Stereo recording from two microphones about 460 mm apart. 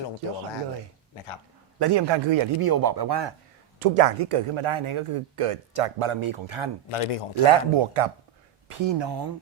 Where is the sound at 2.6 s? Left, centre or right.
Right.